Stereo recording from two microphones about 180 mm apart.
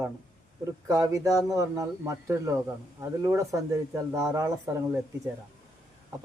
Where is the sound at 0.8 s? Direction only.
20° right (ahead or behind).